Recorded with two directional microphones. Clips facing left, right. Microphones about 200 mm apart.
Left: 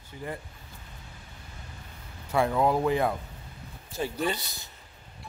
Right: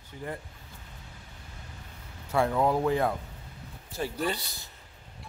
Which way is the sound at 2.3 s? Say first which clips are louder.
Left 1 dB; 10° left (ahead or behind).